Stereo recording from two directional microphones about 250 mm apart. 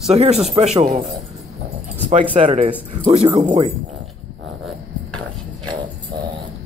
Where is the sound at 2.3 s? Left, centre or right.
Right.